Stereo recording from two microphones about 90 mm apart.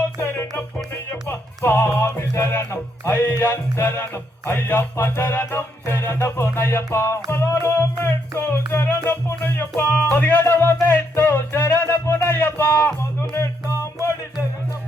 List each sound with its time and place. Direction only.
0.2 s music: 30° left (ahead or behind)